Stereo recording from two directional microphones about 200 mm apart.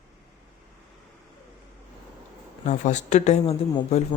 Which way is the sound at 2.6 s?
35° left (ahead or behind).